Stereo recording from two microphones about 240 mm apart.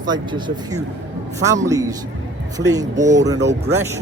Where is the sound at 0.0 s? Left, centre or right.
Centre.